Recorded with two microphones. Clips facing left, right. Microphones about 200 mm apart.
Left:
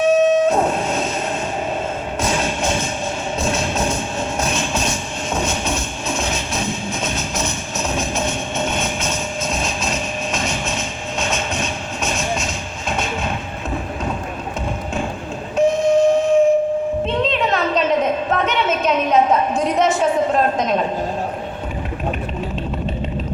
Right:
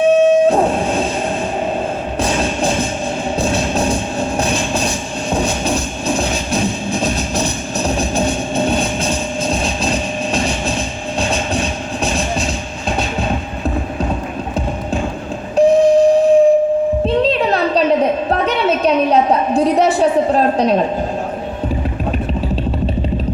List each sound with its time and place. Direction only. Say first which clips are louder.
0.0 s train: right 4 dB; 30° right (ahead or behind)
2.2 s music: right 3 dB; 35° right (ahead or behind)
15.5 s a sound: right 5 dB; 35° right (ahead or behind)